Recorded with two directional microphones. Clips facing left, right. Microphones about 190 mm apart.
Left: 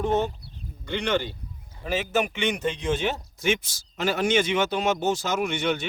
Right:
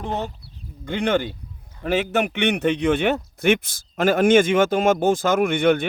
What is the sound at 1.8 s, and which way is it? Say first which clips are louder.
A man's voice: right 4 dB; 65° right (ahead or behind).